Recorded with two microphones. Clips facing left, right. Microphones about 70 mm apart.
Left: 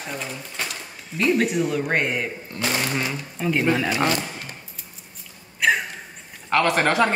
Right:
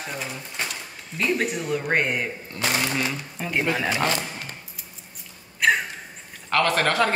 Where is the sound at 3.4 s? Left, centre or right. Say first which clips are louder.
Left 4 dB; centre.